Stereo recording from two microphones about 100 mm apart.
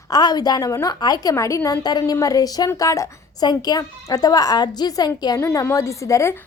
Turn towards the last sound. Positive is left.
turn(degrees=30)  # may be behind; listen again after turning